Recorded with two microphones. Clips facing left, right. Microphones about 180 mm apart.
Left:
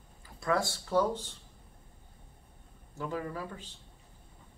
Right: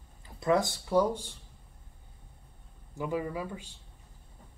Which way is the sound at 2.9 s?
10° right (ahead or behind).